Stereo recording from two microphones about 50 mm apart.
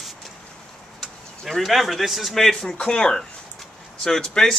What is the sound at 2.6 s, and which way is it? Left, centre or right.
Rub, centre.